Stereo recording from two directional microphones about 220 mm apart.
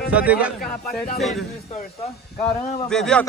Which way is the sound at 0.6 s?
40° left (ahead or behind).